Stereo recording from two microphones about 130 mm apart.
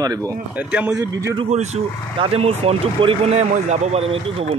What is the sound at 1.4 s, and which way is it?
Speech, 55° right (ahead or behind).